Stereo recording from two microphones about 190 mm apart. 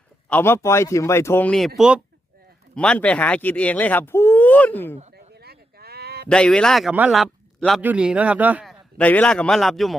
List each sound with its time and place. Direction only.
0.3 s speech: 10° left (ahead or behind)
5.1 s a sound: 55° right (ahead or behind)
6.2 s a man's voice: 5° left (ahead or behind)
9.0 s a man's voice: 5° left (ahead or behind)